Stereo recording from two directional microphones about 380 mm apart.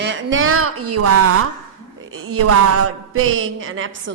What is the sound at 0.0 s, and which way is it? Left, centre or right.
A woman's voice, right.